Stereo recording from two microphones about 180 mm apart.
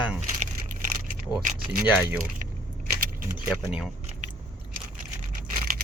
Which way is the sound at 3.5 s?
5° right (ahead or behind).